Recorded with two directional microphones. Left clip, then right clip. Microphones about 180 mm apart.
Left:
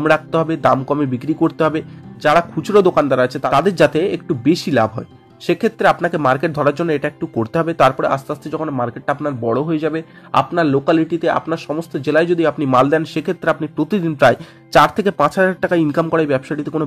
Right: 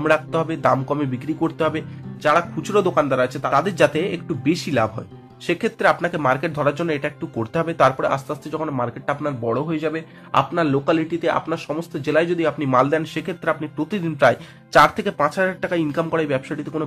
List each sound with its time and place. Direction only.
0.0 s speech: 35° left (ahead or behind)